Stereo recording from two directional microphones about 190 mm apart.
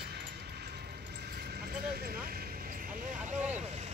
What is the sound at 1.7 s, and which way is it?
Vehicle, 50° right (ahead or behind).